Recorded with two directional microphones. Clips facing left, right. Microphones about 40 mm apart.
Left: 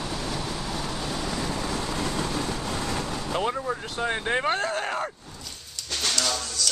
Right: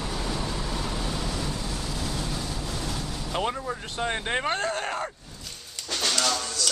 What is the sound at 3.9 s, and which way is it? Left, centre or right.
Speech, centre.